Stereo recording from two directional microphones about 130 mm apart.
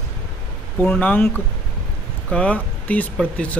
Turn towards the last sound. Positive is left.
turn(degrees=10)  # may be behind; listen again after turning